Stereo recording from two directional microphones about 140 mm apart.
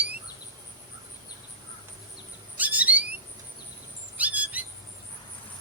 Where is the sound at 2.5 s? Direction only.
10° right (ahead or behind).